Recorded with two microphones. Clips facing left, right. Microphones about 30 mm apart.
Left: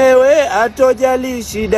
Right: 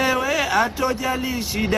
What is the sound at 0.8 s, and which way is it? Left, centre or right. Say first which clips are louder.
Speech: left 11 dB; right.